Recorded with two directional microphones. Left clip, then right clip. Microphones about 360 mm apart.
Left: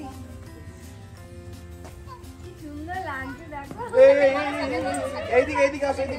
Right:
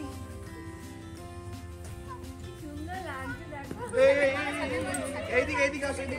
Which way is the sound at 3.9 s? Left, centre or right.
Left.